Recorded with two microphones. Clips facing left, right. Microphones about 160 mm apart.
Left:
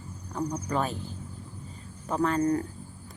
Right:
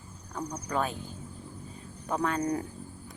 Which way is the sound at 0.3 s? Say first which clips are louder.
Left 3 dB; 5° left (ahead or behind).